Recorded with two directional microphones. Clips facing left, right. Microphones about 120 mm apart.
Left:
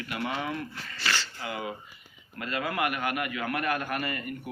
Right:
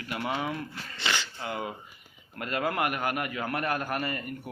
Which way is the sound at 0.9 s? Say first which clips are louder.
Even; 20° right (ahead or behind).